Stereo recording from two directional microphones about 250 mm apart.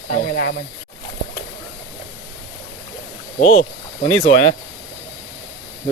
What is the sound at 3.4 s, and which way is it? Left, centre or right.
Speech, left.